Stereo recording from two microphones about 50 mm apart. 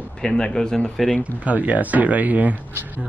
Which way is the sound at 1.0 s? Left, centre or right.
Centre.